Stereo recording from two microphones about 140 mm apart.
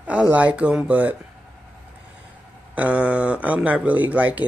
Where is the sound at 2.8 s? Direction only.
10° right (ahead or behind).